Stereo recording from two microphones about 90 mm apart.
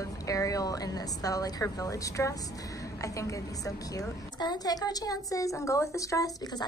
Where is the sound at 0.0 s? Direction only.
40° left (ahead or behind).